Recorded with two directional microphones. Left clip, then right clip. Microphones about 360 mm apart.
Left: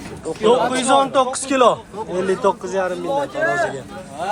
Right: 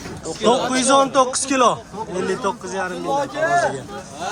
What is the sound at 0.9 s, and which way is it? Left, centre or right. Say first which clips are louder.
A man's voice: right 1 dB; centre.